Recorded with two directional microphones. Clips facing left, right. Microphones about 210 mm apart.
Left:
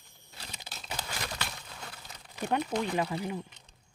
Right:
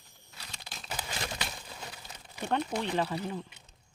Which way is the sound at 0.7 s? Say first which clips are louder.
Right 1 dB; centre (ahead or behind).